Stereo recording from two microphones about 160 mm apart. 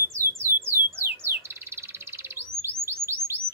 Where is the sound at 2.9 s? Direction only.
15° right (ahead or behind).